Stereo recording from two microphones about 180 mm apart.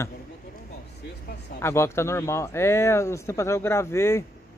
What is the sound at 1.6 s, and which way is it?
Speech, 15° left (ahead or behind).